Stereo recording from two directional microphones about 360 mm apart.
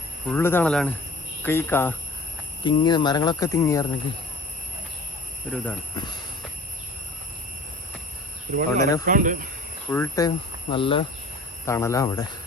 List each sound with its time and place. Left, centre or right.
0.3 s speech: centre
5.5 s speech: centre
8.5 s speech: right
9.9 s speech: centre